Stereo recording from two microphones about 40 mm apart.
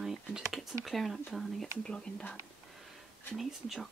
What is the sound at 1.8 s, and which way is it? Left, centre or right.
Speech, centre.